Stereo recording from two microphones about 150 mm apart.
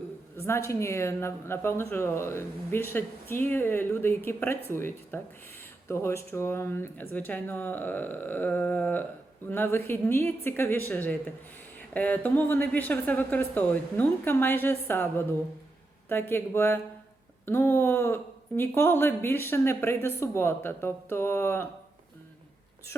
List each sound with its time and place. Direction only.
0.3 s speech: 15° left (ahead or behind)